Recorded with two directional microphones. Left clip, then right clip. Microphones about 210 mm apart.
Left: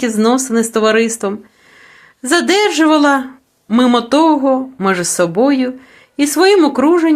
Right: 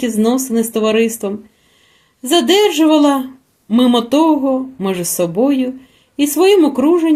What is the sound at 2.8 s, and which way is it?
Speech, 30° left (ahead or behind).